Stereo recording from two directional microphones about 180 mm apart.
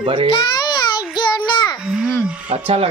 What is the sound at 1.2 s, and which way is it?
Child singing, 25° left (ahead or behind).